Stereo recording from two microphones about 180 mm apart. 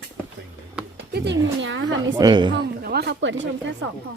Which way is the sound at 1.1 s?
75° right (ahead or behind).